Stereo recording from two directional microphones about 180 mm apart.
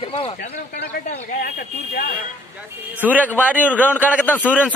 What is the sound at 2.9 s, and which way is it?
A man's voice, 10° right (ahead or behind).